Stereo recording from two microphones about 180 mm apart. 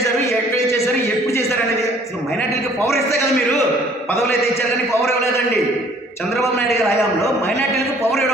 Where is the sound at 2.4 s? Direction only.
15° left (ahead or behind).